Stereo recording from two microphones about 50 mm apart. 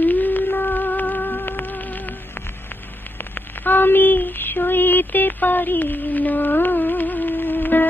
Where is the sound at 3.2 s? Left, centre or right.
Left.